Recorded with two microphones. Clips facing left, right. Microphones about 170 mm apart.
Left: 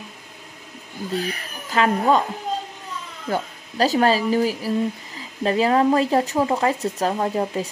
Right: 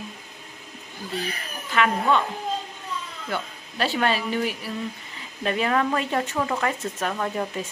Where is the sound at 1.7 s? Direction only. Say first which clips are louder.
Left 3 dB; 40° left (ahead or behind).